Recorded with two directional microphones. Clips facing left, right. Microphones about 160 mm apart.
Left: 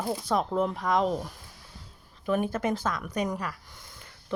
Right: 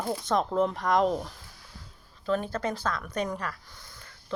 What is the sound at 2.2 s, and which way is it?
Speech, 15° left (ahead or behind).